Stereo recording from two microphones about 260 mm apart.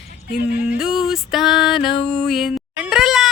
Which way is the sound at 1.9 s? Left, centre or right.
Centre.